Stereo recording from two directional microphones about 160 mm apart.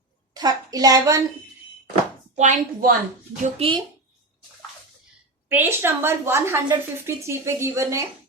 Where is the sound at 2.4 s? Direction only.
50° right (ahead or behind).